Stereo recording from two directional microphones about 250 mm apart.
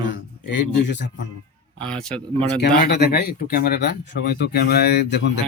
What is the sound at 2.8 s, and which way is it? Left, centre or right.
Speech, left.